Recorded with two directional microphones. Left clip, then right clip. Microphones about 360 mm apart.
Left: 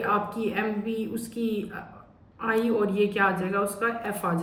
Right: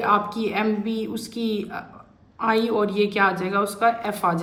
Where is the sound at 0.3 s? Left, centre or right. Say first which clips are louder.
Right 4 dB; centre.